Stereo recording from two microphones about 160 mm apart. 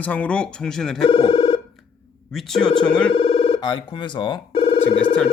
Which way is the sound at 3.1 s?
35° left (ahead or behind).